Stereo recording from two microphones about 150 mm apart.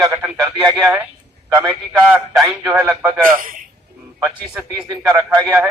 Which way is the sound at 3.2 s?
65° right (ahead or behind).